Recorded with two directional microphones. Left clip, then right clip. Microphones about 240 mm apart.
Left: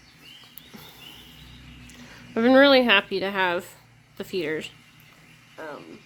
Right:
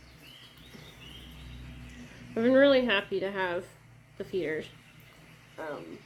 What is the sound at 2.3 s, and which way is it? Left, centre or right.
Speech, left.